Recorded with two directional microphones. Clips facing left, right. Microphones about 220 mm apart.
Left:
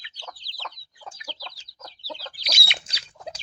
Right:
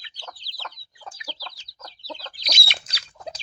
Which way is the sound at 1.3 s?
5° right (ahead or behind).